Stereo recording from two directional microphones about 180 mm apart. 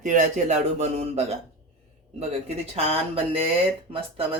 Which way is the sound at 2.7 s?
35° right (ahead or behind).